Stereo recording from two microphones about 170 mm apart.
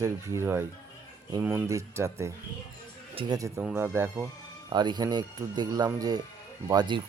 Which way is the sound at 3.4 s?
20° right (ahead or behind).